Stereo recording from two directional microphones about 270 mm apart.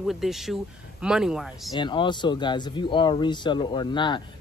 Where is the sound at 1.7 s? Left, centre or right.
Centre.